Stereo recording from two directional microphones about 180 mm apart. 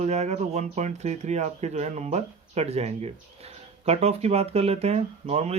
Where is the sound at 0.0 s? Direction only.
40° right (ahead or behind).